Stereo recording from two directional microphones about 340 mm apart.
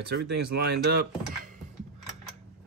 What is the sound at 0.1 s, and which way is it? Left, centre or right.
Speech, right.